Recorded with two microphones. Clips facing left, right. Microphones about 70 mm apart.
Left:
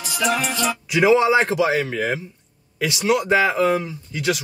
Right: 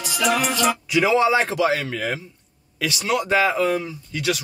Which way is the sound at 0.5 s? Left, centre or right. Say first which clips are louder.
Right 2 dB; right.